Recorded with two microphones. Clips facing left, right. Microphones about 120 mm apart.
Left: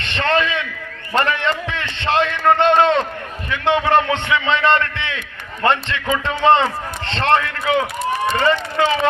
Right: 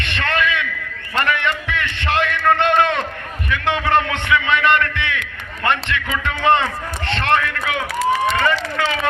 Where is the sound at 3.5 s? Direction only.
20° left (ahead or behind).